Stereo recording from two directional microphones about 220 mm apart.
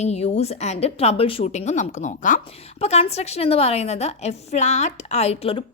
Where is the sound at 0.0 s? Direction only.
30° left (ahead or behind).